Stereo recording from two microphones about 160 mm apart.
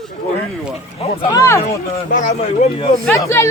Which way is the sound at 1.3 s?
20° left (ahead or behind).